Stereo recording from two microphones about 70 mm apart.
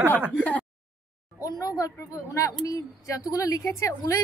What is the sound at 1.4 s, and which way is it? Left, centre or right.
Speech, left.